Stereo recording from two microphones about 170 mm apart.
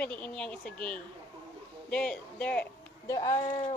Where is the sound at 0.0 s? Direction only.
10° left (ahead or behind).